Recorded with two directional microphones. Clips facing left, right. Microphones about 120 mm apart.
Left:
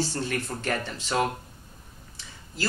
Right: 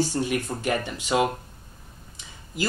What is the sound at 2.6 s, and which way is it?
Speech, 15° right (ahead or behind).